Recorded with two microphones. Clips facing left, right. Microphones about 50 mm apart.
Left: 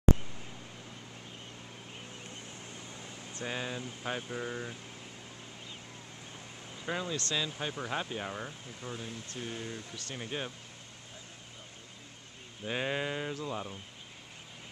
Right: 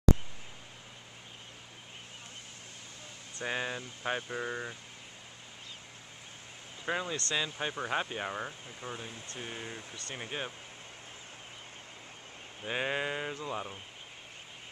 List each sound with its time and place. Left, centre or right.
3.4 s speech: centre
6.9 s speech: centre
12.6 s speech: centre